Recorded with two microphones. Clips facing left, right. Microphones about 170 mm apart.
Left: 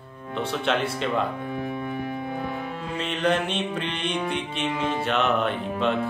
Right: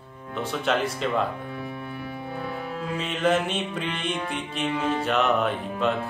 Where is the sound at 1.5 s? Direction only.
20° left (ahead or behind).